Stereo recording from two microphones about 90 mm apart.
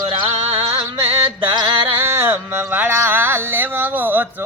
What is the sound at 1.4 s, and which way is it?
Music, 60° right (ahead or behind).